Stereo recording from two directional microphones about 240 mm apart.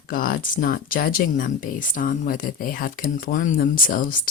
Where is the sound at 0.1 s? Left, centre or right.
Left.